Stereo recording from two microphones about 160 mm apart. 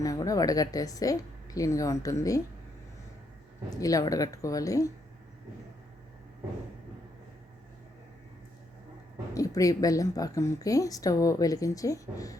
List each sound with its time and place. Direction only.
0.0 s a woman's voice: 20° left (ahead or behind)
3.8 s a woman's voice: 20° left (ahead or behind)
9.3 s a woman's voice: 20° left (ahead or behind)